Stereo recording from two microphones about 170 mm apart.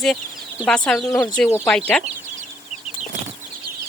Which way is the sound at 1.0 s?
15° left (ahead or behind).